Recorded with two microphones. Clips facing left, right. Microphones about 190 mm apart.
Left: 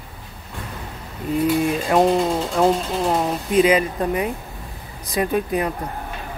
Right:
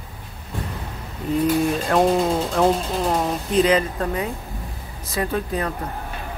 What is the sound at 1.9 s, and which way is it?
Speech, centre (ahead or behind).